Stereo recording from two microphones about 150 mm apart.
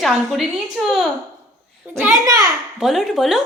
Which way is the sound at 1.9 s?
20° right (ahead or behind).